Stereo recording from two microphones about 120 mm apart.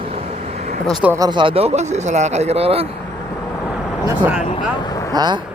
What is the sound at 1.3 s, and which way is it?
Speech, 45° right (ahead or behind).